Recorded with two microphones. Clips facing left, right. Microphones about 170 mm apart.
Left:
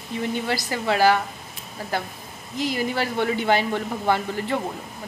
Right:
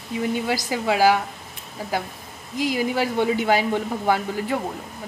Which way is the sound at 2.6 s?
10° right (ahead or behind).